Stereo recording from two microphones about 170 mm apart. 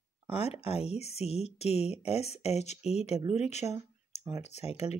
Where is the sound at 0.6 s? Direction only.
35° left (ahead or behind).